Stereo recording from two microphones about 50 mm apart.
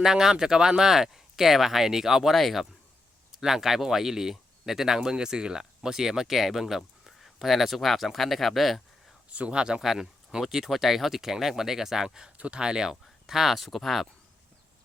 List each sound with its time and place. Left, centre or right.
0.0 s speech: centre
9.3 s speech: right; by 14.1 s centre